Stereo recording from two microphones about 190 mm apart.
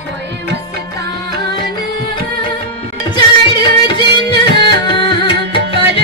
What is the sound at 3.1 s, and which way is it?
Music, 25° left (ahead or behind).